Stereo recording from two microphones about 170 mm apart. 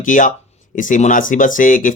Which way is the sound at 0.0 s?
50° left (ahead or behind).